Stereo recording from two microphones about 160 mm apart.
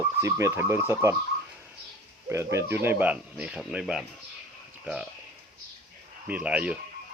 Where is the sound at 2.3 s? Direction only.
15° right (ahead or behind).